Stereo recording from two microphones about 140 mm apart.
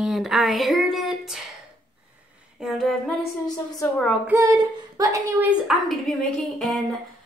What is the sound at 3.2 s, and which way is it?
Speech, 25° left (ahead or behind).